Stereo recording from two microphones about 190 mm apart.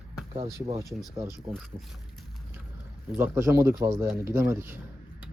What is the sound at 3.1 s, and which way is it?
Speech, 10° right (ahead or behind).